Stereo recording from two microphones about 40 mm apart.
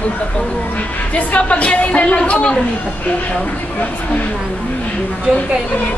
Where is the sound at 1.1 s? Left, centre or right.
Left.